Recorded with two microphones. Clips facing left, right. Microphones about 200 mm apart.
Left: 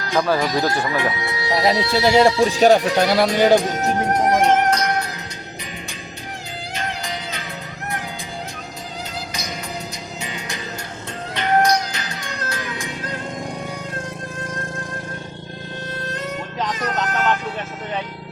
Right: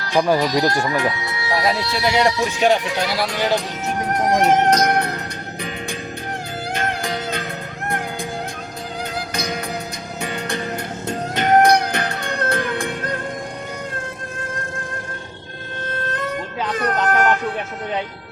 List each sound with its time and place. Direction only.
0.1 s speech: 15° right (ahead or behind)
0.9 s speech: 25° left (ahead or behind); by 3.9 s 45° left (ahead or behind)
4.7 s music: 50° right (ahead or behind)
6.7 s music: 55° right (ahead or behind)
9.1 s music: 55° right (ahead or behind)
16.7 s vehicle: 55° right (ahead or behind)